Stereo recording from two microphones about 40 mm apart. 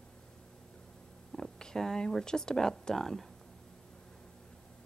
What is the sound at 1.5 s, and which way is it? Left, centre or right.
Speech, centre.